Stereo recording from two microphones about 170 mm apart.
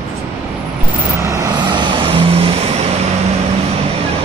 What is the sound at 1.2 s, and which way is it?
Vehicle, 20° right (ahead or behind).